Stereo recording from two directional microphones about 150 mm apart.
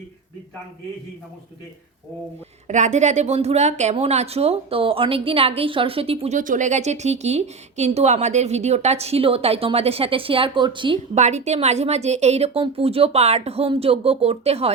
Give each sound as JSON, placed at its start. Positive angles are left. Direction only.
{"t": 2.6, "sound": "speech", "side_deg": -50}
{"t": 11.1, "sound": "speech", "side_deg": -50}